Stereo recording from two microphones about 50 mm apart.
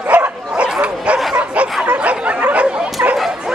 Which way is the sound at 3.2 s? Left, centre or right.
Centre.